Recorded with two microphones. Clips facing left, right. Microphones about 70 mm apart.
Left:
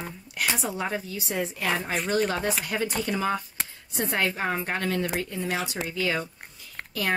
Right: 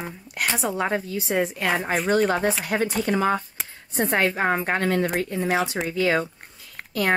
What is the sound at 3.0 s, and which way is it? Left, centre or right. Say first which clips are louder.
A woman's voice: right 6 dB; right.